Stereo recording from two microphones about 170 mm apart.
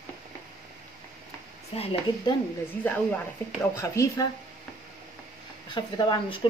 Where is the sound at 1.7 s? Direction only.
35° left (ahead or behind).